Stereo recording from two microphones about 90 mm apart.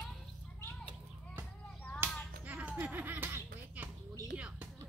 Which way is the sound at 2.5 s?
15° right (ahead or behind).